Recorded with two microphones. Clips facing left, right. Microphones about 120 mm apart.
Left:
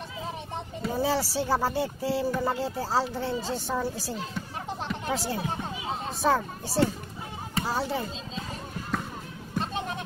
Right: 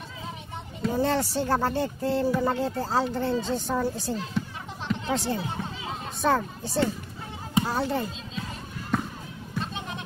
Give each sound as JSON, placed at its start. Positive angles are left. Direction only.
{"t": 0.8, "sound": "speech", "side_deg": 5}
{"t": 4.8, "sound": "a sound", "side_deg": 5}
{"t": 6.2, "sound": "speech", "side_deg": 5}
{"t": 9.6, "sound": "bleat", "side_deg": 40}